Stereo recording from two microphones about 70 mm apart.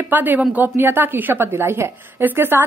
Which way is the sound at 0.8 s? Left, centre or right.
Right.